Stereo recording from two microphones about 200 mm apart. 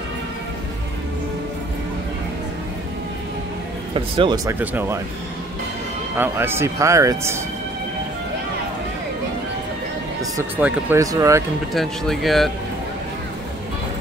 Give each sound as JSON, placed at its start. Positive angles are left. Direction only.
{"t": 3.9, "sound": "speech", "side_deg": -25}
{"t": 4.5, "sound": "speech", "side_deg": -10}
{"t": 6.1, "sound": "speech", "side_deg": -10}
{"t": 10.3, "sound": "speech", "side_deg": -15}
{"t": 11.7, "sound": "speech", "side_deg": 0}